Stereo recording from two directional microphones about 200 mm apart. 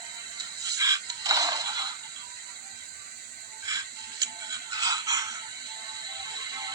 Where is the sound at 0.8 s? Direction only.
15° right (ahead or behind).